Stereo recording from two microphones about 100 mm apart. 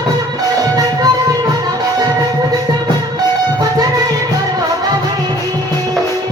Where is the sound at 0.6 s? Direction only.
35° right (ahead or behind).